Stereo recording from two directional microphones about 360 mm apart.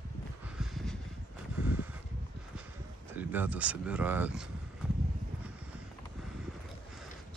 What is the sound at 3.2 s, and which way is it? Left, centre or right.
Speech, centre.